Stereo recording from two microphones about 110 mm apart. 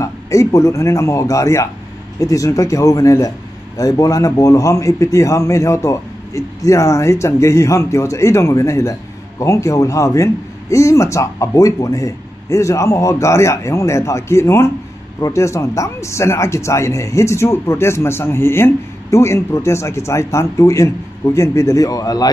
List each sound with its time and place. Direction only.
0.0 s speech: 30° left (ahead or behind)